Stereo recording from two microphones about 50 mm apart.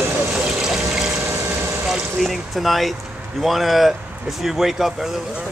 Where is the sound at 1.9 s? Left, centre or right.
Centre.